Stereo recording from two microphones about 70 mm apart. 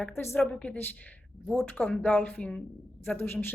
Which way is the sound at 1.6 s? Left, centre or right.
Left.